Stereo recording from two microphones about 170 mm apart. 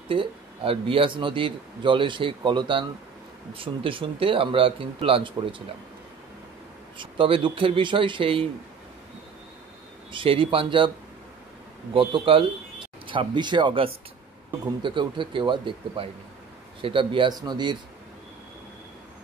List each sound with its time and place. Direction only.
0.1 s speech: 30° right (ahead or behind)
7.0 s speech: 30° right (ahead or behind)
10.1 s speech: 30° right (ahead or behind)
11.9 s speech: 30° right (ahead or behind)